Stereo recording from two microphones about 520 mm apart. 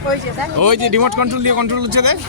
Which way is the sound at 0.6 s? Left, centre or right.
Right.